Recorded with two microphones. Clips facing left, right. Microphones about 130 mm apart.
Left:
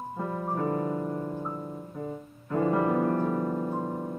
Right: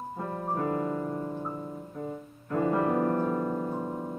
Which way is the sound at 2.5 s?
35° left (ahead or behind).